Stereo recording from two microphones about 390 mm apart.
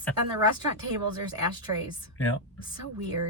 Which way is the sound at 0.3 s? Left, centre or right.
Right.